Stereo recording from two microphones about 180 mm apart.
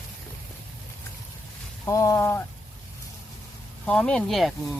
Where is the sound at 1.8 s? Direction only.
20° left (ahead or behind).